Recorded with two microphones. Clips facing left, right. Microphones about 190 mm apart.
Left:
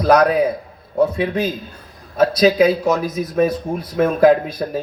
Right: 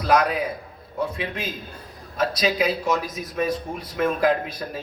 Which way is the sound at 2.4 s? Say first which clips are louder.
Left 10 dB; 45° left (ahead or behind).